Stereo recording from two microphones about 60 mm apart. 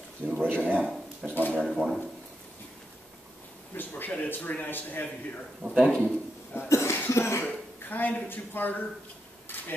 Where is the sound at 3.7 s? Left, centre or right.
Left.